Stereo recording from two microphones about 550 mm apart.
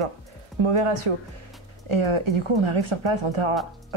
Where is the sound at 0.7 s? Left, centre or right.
Right.